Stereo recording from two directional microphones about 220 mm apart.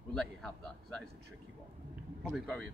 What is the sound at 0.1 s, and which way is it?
Speech, centre (ahead or behind).